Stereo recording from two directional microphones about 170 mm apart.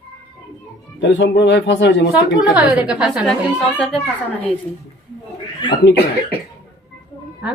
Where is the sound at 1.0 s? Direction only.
90° left.